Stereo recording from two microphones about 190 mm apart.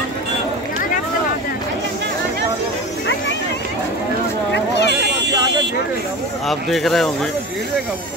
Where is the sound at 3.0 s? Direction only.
70° left (ahead or behind).